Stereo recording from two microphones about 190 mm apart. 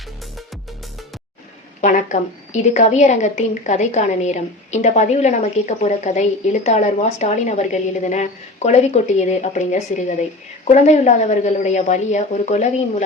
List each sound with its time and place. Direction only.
1.8 s a woman's voice: 40° left (ahead or behind)